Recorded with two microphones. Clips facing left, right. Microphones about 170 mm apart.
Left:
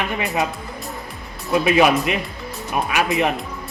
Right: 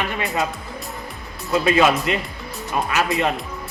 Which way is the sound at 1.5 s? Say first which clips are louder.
Left 1 dB; 15° left (ahead or behind).